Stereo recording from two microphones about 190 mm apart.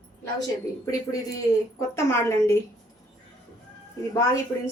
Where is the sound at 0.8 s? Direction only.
20° left (ahead or behind).